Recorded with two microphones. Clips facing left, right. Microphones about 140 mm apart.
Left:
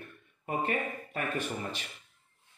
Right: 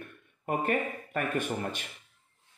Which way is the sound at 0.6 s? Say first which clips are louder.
Right 2 dB; 50° right (ahead or behind).